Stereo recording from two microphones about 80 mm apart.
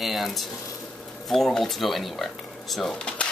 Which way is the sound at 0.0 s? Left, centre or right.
Centre.